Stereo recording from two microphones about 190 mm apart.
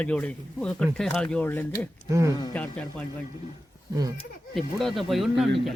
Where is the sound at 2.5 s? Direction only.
10° left (ahead or behind).